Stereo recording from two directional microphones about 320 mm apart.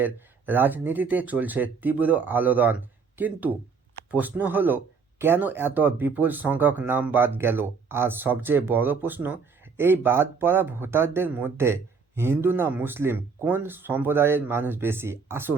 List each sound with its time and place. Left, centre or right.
0.0 s speech: centre